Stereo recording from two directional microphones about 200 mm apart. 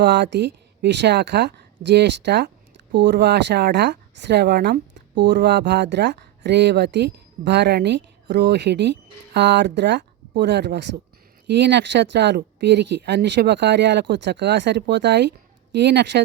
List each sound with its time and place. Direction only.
0.0 s speech: 60° right (ahead or behind)